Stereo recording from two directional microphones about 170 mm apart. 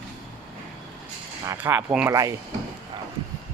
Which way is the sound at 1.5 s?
10° right (ahead or behind).